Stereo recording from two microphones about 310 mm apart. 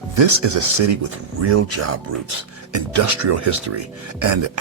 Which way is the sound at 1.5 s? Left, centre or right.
Right.